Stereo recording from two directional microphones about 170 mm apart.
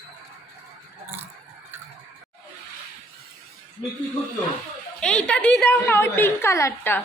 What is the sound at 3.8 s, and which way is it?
Speech, 30° left (ahead or behind).